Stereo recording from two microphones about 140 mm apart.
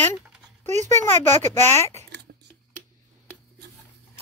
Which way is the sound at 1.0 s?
15° left (ahead or behind).